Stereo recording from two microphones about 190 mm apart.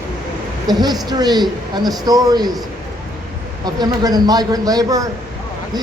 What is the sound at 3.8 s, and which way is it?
Speech, 20° right (ahead or behind).